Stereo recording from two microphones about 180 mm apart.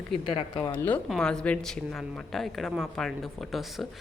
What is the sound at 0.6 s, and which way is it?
Speech, 10° left (ahead or behind).